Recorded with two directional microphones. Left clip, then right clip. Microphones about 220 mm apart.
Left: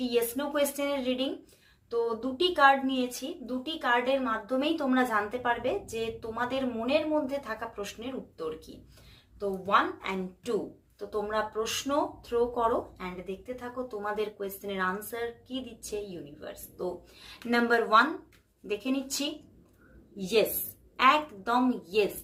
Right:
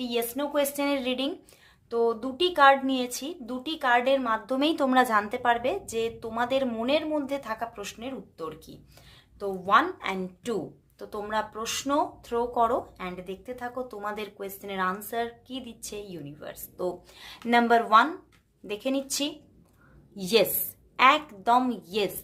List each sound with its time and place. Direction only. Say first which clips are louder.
0.0 s a woman's voice: even; 35° right (ahead or behind)
20.1 s speech: right 3 dB; 40° right (ahead or behind)